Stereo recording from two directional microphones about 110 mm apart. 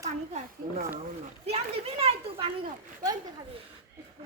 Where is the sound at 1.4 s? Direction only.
65° right (ahead or behind).